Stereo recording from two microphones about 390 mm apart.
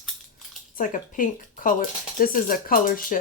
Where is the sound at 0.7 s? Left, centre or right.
Left.